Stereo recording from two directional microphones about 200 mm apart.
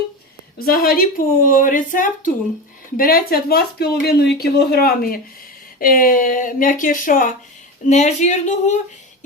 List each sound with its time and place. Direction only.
0.6 s a woman's voice: 50° left (ahead or behind)